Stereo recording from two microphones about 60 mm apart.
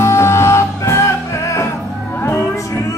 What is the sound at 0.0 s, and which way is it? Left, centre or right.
Music, left.